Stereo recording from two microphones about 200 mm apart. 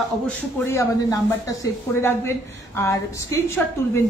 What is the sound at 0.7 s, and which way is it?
Speech, 15° left (ahead or behind).